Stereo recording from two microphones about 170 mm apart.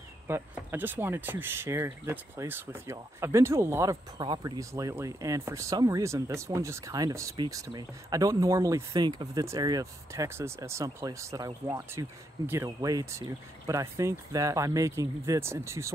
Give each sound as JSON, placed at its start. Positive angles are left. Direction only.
{"t": 0.3, "sound": "speech", "side_deg": -10}